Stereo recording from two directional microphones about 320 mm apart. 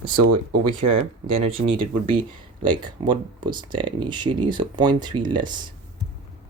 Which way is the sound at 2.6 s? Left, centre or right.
Centre.